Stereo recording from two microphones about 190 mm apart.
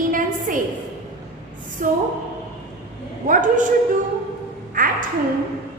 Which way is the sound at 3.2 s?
45° right (ahead or behind).